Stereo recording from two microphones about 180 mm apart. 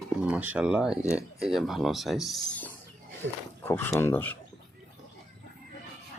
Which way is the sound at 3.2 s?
90° right.